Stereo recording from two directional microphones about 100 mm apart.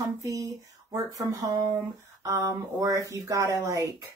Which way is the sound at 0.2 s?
35° right (ahead or behind).